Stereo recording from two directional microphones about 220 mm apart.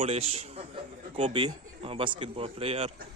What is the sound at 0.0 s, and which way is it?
Speech, 30° right (ahead or behind).